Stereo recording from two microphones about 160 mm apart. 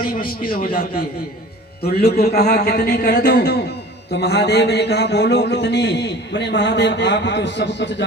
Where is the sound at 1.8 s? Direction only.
85° left.